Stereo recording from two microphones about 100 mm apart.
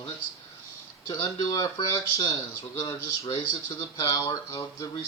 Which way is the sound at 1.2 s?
30° left (ahead or behind).